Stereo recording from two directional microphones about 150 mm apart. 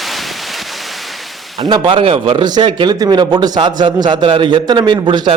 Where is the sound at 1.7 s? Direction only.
35° right (ahead or behind).